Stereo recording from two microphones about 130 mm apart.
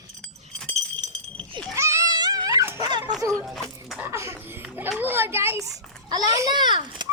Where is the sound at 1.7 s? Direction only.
25° right (ahead or behind).